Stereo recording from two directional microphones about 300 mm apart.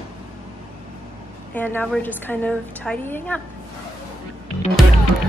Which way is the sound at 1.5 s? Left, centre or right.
Centre.